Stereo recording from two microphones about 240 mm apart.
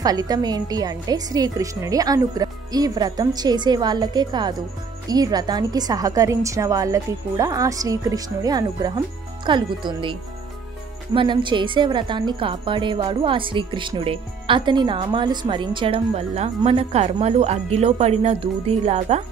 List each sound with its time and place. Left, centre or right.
0.0 s a woman's voice: centre
11.1 s a woman's voice: centre